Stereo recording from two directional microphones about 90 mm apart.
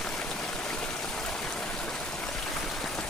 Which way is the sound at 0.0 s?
5° left (ahead or behind).